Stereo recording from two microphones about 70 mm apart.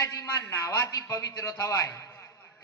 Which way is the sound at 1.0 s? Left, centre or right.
Left.